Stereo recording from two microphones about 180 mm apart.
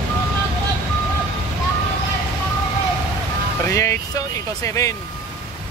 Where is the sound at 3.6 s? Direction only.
15° left (ahead or behind).